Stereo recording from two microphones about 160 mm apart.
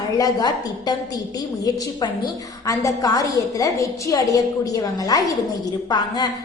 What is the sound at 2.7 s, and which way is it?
A woman's voice, 20° left (ahead or behind).